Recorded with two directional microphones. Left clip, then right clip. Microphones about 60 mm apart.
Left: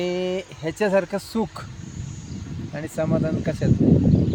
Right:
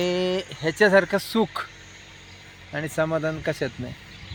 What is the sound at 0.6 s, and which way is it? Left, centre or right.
Speech, centre.